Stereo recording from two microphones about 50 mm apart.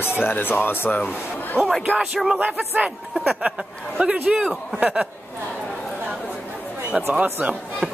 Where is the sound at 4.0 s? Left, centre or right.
Right.